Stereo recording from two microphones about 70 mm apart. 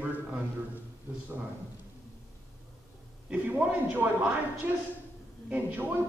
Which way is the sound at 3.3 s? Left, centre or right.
Right.